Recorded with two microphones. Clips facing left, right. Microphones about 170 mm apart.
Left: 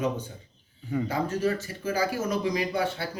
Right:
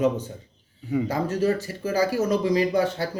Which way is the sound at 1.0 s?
35° right (ahead or behind).